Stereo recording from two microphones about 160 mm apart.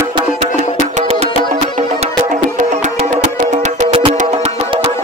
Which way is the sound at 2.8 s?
45° right (ahead or behind).